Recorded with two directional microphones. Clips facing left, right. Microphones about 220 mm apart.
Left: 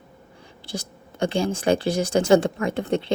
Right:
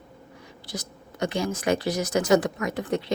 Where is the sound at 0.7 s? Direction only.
30° left (ahead or behind).